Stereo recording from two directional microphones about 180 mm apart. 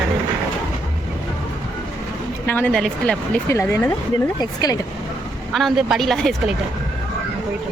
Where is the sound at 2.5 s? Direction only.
10° left (ahead or behind).